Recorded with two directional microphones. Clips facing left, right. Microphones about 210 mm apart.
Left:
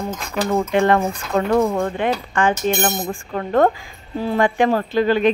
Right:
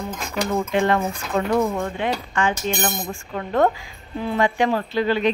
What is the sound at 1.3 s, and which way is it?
Speech, 60° left (ahead or behind).